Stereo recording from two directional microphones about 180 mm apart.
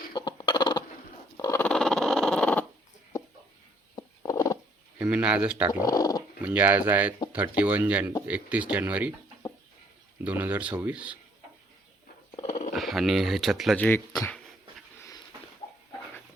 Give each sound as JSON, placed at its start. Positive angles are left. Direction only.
{"t": 0.1, "sound": "a sound", "side_deg": 25}
{"t": 1.4, "sound": "dog", "side_deg": 15}
{"t": 3.9, "sound": "a sound", "side_deg": 20}
{"t": 4.9, "sound": "speech", "side_deg": -5}
{"t": 5.8, "sound": "speech", "side_deg": 20}
{"t": 6.4, "sound": "speech", "side_deg": -10}
{"t": 10.2, "sound": "speech", "side_deg": -10}
{"t": 12.4, "sound": "a sound", "side_deg": 40}
{"t": 12.7, "sound": "speech", "side_deg": 0}
{"t": 13.7, "sound": "speech", "side_deg": 10}